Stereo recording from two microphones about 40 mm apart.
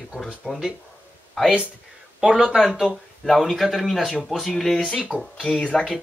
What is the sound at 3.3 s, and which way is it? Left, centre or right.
Speech, centre.